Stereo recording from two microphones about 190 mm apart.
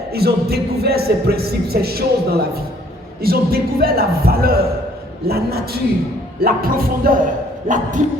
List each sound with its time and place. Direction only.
0.1 s a man's voice: 55° right (ahead or behind)